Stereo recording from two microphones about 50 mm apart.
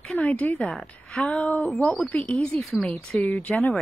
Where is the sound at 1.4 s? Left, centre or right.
Left.